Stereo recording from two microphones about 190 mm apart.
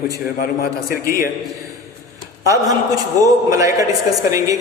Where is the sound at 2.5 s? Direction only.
20° right (ahead or behind).